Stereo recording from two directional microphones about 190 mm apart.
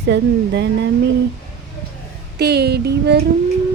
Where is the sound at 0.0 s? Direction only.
65° right (ahead or behind).